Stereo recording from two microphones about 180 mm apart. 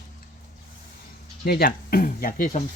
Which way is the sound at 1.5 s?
55° left (ahead or behind).